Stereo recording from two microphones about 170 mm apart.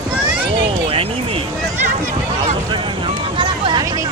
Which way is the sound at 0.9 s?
35° right (ahead or behind).